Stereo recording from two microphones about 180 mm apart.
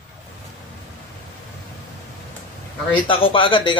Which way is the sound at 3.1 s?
30° left (ahead or behind).